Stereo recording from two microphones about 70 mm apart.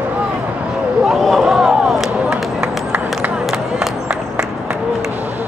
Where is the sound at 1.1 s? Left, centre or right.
Centre.